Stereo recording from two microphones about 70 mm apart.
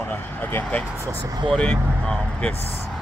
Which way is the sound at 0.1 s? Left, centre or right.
Left.